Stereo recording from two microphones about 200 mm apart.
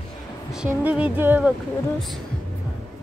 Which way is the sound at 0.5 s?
5° right (ahead or behind).